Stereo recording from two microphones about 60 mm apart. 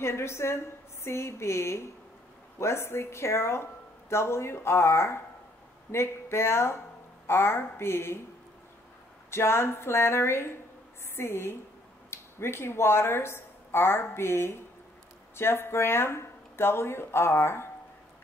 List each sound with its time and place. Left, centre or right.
0.0 s speech: left
9.3 s speech: left